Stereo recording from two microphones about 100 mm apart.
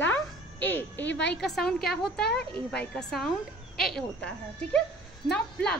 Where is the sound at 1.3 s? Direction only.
5° left (ahead or behind).